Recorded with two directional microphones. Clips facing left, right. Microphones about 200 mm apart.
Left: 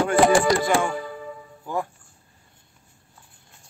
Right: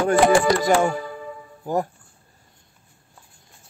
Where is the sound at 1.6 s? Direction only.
40° right (ahead or behind).